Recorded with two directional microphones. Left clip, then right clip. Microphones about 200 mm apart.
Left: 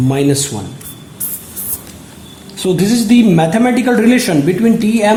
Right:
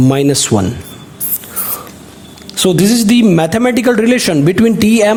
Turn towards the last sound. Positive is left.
turn(degrees=-55)  # may be behind; listen again after turning